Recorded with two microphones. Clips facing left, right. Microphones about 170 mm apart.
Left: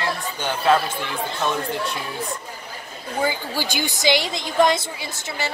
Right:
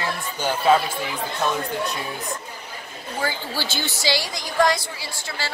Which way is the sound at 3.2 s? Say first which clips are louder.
Left 2 dB; 15° left (ahead or behind).